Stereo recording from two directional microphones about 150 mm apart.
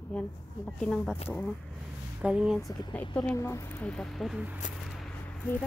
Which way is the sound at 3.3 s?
20° left (ahead or behind).